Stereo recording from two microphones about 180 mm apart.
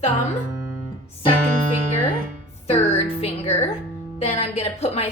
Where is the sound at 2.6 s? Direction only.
35° left (ahead or behind).